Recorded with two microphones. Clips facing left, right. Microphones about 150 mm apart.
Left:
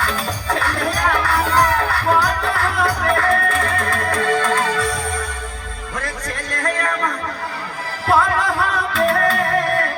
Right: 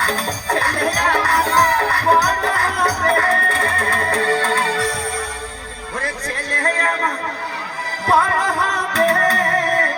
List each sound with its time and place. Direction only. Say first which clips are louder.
0.0 s music: right 1 dB; 40° right (ahead or behind)
6.0 s a sound: right 2 dB; 35° right (ahead or behind)
8.0 s music: even; 35° right (ahead or behind)